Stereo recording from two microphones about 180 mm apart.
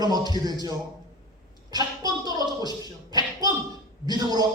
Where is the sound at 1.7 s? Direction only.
20° right (ahead or behind).